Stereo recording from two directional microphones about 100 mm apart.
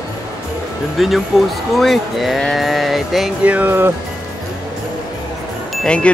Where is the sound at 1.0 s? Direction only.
Centre (ahead or behind).